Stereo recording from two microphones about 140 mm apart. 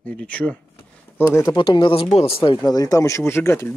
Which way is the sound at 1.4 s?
30° left (ahead or behind).